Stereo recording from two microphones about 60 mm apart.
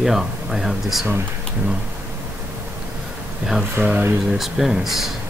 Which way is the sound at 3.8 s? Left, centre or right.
Right.